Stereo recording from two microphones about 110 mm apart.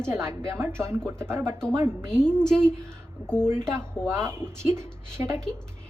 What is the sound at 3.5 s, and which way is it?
A woman's voice, 25° right (ahead or behind).